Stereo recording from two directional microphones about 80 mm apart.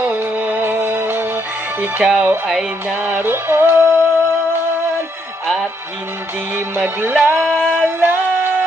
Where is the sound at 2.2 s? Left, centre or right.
Right.